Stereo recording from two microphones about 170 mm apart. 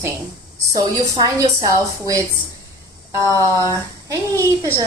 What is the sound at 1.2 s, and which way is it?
A woman's voice, 20° right (ahead or behind).